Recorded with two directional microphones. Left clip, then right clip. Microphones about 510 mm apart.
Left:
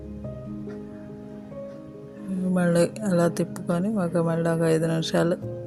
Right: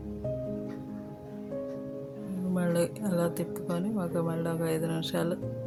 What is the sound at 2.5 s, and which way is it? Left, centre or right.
Speech, right.